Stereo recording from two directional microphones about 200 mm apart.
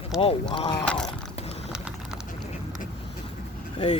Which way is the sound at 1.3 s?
30° left (ahead or behind).